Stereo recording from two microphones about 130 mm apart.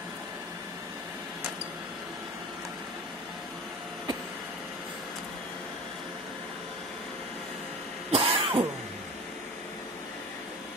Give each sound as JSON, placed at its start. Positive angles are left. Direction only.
{"t": 8.1, "sound": "throat clearing", "side_deg": -45}